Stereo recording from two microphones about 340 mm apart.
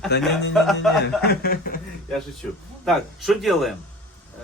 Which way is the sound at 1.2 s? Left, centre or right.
Left.